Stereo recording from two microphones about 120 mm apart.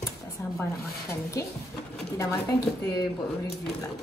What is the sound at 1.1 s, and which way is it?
A woman's voice, 25° left (ahead or behind).